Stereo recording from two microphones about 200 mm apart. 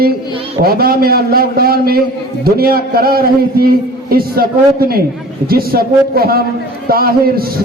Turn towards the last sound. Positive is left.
turn(degrees=-50)  # may be behind; listen again after turning